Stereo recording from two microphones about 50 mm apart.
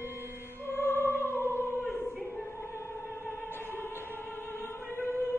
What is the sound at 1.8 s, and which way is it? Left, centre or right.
Choir, centre.